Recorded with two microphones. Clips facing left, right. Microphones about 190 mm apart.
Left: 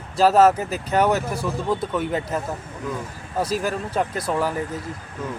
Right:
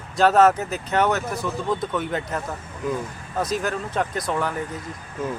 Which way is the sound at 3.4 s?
10° left (ahead or behind).